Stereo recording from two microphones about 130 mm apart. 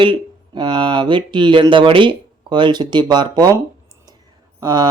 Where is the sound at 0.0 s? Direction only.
40° right (ahead or behind).